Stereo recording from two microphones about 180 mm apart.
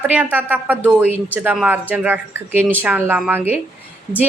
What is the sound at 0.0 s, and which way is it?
A woman's voice, 10° right (ahead or behind).